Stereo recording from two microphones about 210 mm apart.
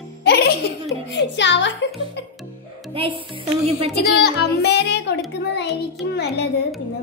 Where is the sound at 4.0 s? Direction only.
50° left (ahead or behind).